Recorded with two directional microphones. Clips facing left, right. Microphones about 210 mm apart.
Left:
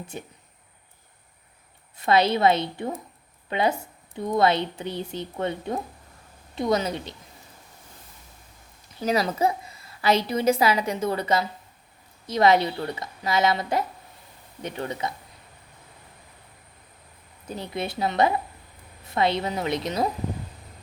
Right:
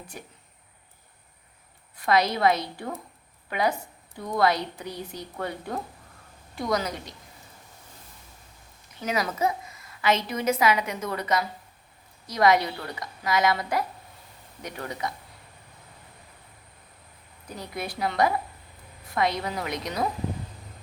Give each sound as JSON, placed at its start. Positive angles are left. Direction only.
{"t": 0.1, "sound": "a woman's voice", "side_deg": 25}
{"t": 2.0, "sound": "a woman's voice", "side_deg": 25}
{"t": 9.0, "sound": "a woman's voice", "side_deg": 35}
{"t": 17.5, "sound": "a woman's voice", "side_deg": 25}